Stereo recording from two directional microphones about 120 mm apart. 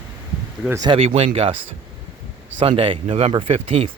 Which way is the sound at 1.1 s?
50° right (ahead or behind).